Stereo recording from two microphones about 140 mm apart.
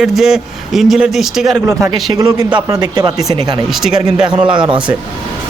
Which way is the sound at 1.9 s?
25° right (ahead or behind).